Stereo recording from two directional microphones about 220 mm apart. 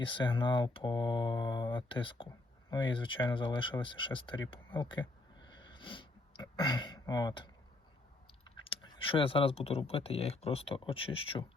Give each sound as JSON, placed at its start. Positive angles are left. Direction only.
{"t": 0.0, "sound": "speech", "side_deg": 20}
{"t": 5.5, "sound": "sniff", "side_deg": 20}
{"t": 8.4, "sound": "speech", "side_deg": 20}